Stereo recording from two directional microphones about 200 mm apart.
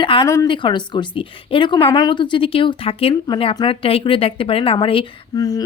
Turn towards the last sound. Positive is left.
turn(degrees=20)  # may be behind; listen again after turning